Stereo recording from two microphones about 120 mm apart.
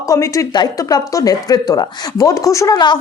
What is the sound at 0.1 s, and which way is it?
A woman's voice, 30° left (ahead or behind).